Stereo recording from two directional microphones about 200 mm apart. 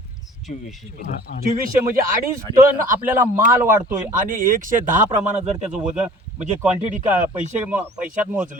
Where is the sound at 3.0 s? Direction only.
10° right (ahead or behind).